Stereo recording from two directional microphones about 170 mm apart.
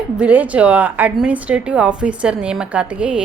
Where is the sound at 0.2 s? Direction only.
10° right (ahead or behind).